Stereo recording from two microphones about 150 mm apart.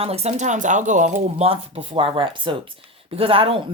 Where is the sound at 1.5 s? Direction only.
35° right (ahead or behind).